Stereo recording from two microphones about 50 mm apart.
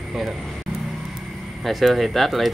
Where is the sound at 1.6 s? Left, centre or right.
Centre.